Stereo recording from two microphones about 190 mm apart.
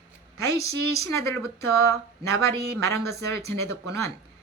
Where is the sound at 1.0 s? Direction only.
15° left (ahead or behind).